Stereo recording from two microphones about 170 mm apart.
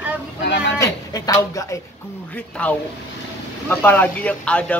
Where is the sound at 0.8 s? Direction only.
20° left (ahead or behind).